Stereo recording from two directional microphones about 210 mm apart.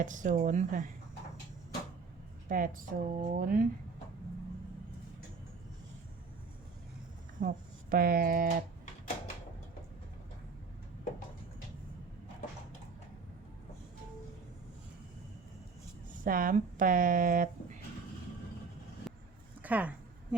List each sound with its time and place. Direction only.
0.0 s speech: 40° right (ahead or behind)
2.5 s speech: 40° right (ahead or behind)
7.3 s speech: 40° right (ahead or behind)
16.2 s speech: 40° right (ahead or behind)
19.1 s a sound: centre (ahead or behind)
19.6 s speech: 5° right (ahead or behind)